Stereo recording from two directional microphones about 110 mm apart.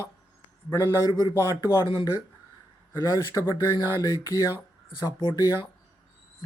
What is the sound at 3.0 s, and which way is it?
Speech, 30° left (ahead or behind).